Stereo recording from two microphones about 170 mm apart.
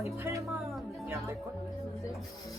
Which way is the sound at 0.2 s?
15° right (ahead or behind).